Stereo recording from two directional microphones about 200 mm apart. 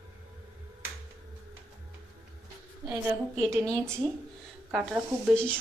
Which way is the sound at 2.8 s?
Centre (ahead or behind).